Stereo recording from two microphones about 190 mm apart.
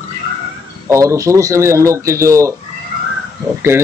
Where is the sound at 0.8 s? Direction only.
15° right (ahead or behind).